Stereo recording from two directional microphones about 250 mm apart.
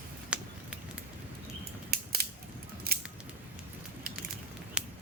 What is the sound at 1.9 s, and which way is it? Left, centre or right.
Mechanisms, right.